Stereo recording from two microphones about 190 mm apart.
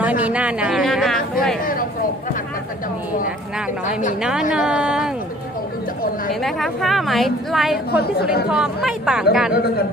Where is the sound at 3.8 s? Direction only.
40° left (ahead or behind).